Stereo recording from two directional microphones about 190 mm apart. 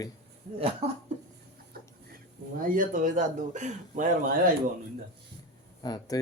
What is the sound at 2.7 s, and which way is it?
Speech, 45° right (ahead or behind).